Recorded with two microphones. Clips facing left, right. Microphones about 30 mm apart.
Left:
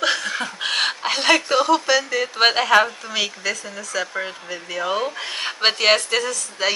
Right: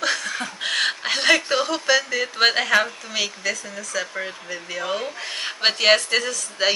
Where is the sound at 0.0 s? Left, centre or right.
Left.